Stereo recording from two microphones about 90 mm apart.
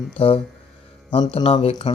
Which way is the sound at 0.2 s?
90° left.